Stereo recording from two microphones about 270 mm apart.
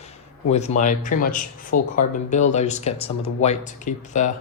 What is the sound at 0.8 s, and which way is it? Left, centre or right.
Speech, left.